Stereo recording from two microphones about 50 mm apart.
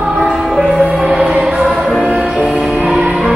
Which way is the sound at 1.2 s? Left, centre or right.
Right.